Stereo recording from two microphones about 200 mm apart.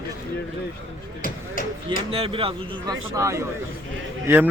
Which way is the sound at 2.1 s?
30° right (ahead or behind).